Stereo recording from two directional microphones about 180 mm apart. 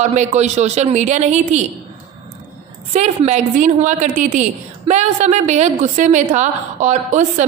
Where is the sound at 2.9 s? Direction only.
40° right (ahead or behind).